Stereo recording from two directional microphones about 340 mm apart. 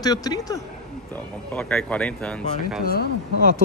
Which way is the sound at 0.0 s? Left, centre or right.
Centre.